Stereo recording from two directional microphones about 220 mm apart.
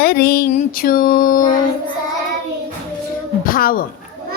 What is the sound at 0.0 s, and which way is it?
A woman's voice, 45° left (ahead or behind).